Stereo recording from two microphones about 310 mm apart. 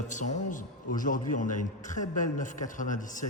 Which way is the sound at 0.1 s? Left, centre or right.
Left.